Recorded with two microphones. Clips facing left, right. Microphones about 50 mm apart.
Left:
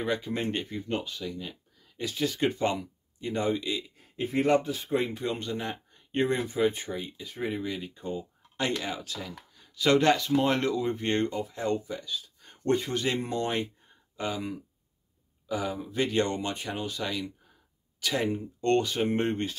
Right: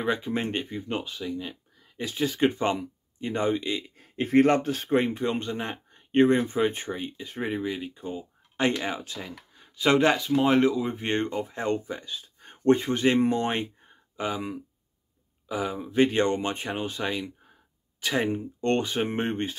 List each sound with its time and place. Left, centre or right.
0.0 s speech: right
4.2 s speech: right
5.2 s speech: right
7.6 s speech: centre
8.5 s speech: right
11.3 s speech: right